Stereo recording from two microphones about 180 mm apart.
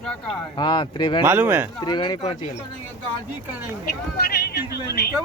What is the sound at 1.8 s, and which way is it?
Speech, 25° left (ahead or behind).